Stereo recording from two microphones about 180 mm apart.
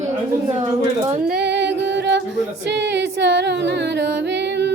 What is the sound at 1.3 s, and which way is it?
Music, 65° right (ahead or behind).